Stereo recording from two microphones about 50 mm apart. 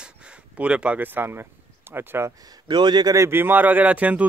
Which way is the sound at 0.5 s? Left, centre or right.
Right.